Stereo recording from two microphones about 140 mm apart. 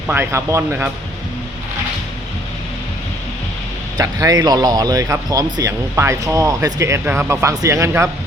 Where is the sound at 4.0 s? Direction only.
25° right (ahead or behind).